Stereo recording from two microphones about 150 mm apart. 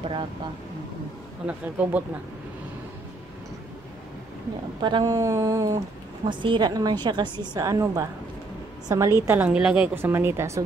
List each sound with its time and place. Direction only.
1.4 s speech: 10° right (ahead or behind)
4.8 s a woman's voice: 30° right (ahead or behind)
9.5 s speech: 5° right (ahead or behind)